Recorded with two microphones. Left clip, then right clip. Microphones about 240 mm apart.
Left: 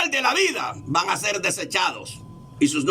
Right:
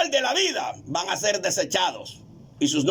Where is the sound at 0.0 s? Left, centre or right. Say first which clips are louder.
Left 2 dB; right.